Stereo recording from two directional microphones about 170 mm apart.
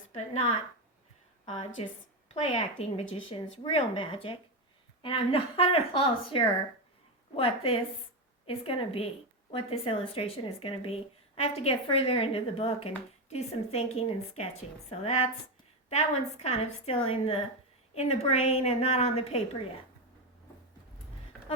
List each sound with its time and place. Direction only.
0.1 s a woman's voice: 35° left (ahead or behind)
7.3 s speech: 35° left (ahead or behind)